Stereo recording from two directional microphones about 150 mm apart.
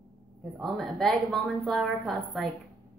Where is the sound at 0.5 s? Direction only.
Centre (ahead or behind).